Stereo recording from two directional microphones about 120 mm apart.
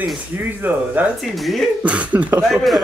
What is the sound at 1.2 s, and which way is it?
Speech, centre (ahead or behind).